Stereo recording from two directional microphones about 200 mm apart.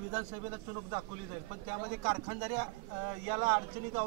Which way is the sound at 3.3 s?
25° right (ahead or behind).